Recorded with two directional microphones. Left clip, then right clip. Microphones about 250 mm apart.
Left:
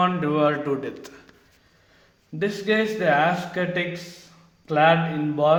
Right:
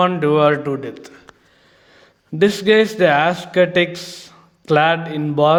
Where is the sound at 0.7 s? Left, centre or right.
Centre.